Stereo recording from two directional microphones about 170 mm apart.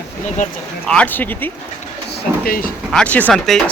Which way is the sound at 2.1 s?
60° left (ahead or behind).